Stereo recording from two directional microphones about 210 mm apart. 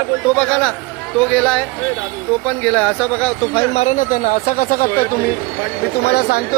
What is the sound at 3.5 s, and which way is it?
Speech, 30° left (ahead or behind).